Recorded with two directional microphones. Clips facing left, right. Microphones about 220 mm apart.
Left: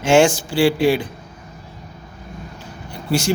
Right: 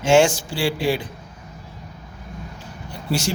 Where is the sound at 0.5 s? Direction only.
65° left (ahead or behind).